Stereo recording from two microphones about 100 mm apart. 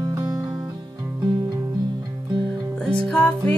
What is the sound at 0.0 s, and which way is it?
Music, 40° right (ahead or behind).